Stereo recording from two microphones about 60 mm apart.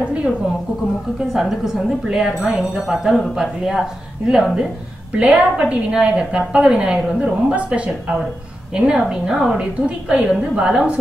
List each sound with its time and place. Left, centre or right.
0.0 s a sound: centre
1.3 s speech: centre
5.1 s speech: centre